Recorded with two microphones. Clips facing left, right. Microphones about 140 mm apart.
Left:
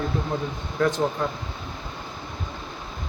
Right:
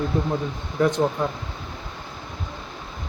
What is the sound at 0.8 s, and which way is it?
Speech, 20° right (ahead or behind).